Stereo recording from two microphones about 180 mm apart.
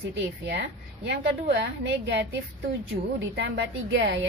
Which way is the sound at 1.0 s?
75° right (ahead or behind).